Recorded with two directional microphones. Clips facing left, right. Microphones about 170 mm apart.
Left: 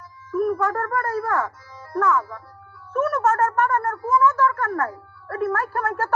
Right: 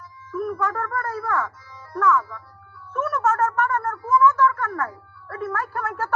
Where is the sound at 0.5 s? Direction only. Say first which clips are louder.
Left 3 dB; 35° left (ahead or behind).